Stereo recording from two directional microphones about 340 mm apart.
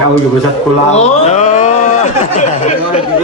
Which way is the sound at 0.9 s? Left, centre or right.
Centre.